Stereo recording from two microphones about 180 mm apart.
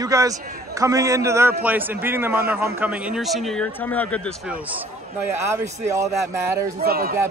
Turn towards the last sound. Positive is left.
turn(degrees=-55)  # may be behind; listen again after turning